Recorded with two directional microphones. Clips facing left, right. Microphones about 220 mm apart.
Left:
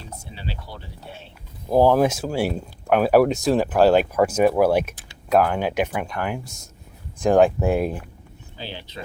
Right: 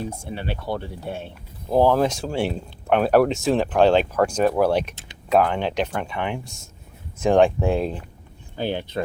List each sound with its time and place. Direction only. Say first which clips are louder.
0.2 s speech: right 5 dB; 60° right (ahead or behind)
1.7 s speech: left 1 dB; 10° left (ahead or behind)
8.5 s speech: right 10 dB; 55° right (ahead or behind)